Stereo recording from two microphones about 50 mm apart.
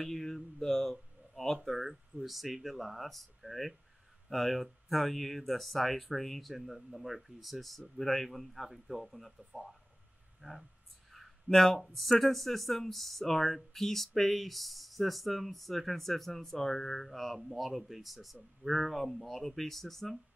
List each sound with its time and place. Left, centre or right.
0.0 s mantra: centre
1.3 s speech: centre
10.4 s speech: centre
11.1 s speech: centre